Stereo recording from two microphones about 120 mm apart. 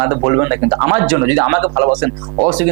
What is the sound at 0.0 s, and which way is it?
Speech, 25° right (ahead or behind).